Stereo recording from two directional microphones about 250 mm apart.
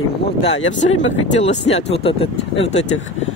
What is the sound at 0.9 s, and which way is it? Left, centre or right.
Speech, left.